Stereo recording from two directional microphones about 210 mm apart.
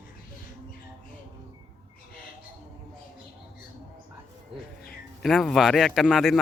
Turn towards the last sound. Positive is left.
turn(degrees=0)  # may be behind; listen again after turning